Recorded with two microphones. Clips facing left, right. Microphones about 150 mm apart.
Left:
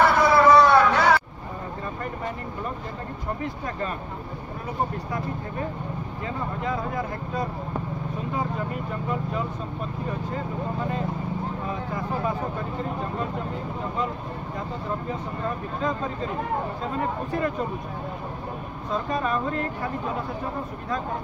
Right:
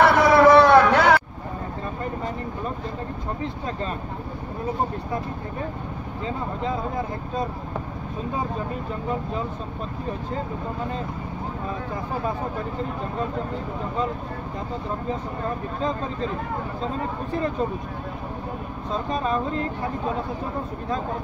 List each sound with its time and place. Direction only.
0.0 s a sound: 70° right (ahead or behind)
6.2 s speech: 25° right (ahead or behind)
19.0 s speech: 25° right (ahead or behind)